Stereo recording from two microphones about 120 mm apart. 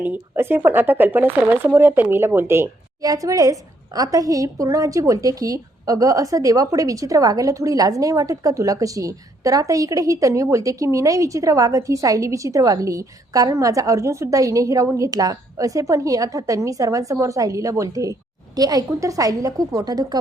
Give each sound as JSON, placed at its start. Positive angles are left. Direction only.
{"t": 0.0, "sound": "speech", "side_deg": -15}